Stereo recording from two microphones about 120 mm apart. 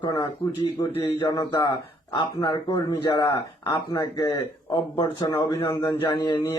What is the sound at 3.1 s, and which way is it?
Speech, 25° left (ahead or behind).